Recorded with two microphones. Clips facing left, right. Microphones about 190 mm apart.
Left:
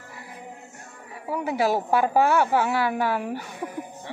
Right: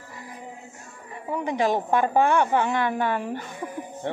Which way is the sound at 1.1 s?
5° left (ahead or behind).